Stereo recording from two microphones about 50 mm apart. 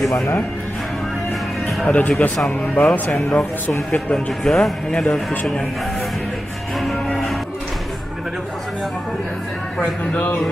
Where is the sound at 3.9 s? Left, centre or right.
Left.